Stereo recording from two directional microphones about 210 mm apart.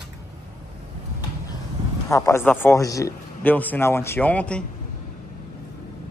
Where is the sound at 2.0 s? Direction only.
15° left (ahead or behind).